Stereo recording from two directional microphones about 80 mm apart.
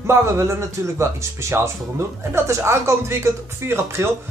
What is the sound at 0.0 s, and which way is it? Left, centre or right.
Speech, right.